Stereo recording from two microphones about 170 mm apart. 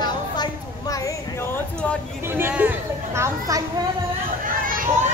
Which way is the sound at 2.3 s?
10° right (ahead or behind).